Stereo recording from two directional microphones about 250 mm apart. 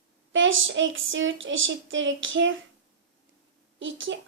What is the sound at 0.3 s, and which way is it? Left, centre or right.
Speech, right.